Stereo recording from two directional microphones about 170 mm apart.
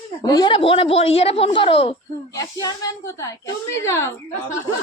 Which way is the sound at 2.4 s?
20° left (ahead or behind).